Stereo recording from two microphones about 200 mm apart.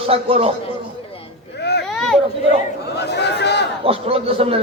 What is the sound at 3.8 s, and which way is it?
Speech, 30° right (ahead or behind).